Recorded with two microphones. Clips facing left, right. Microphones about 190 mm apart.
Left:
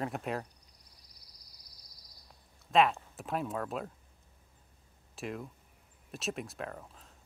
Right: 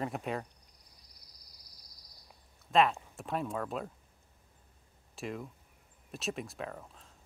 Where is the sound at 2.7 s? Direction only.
Centre (ahead or behind).